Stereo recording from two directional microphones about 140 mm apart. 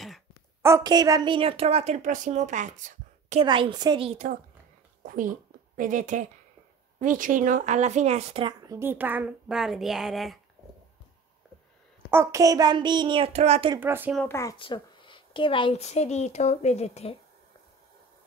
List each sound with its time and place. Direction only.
0.6 s a sound: 20° right (ahead or behind)
0.8 s speech: 25° right (ahead or behind); by 3.3 s 60° right (ahead or behind)
3.3 s a woman's voice: 35° right (ahead or behind)
4.1 s speech: 60° right (ahead or behind)
5.0 s a woman's voice: 75° right (ahead or behind); by 8.5 s 45° right (ahead or behind)
8.6 s speech: 15° right (ahead or behind); by 10.4 s centre (ahead or behind)
12.1 s child singing: 20° right (ahead or behind)
13.3 s speech: 50° right (ahead or behind)
13.7 s speech: 15° right (ahead or behind)
14.2 s speech: 20° left (ahead or behind)
14.6 s a sound: 35° left (ahead or behind)
15.7 s a woman's voice: 50° left (ahead or behind)